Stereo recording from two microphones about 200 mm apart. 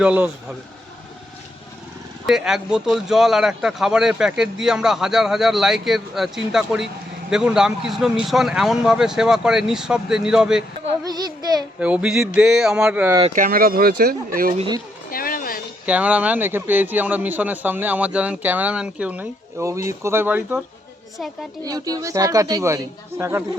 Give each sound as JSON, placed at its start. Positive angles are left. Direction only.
{"t": 0.0, "sound": "a man's voice", "side_deg": -5}
{"t": 2.2, "sound": "speech", "side_deg": 0}
{"t": 11.8, "sound": "speech", "side_deg": -5}
{"t": 13.3, "sound": "speech", "side_deg": -45}
{"t": 15.1, "sound": "a sound", "side_deg": 45}
{"t": 15.9, "sound": "a man's voice", "side_deg": -5}
{"t": 21.6, "sound": "a man's voice", "side_deg": -20}